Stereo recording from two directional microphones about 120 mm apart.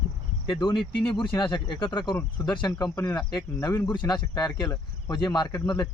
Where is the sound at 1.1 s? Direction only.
40° left (ahead or behind).